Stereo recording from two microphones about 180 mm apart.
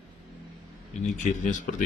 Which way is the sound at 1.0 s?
45° left (ahead or behind).